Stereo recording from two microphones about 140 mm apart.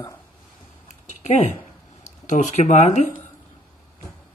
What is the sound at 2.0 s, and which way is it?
Speech, 55° left (ahead or behind).